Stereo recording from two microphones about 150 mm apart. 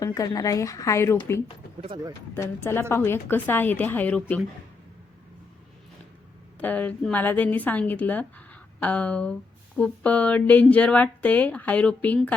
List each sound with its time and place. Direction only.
0.0 s a woman's voice: 25° left (ahead or behind)
6.6 s a woman's voice: 10° left (ahead or behind)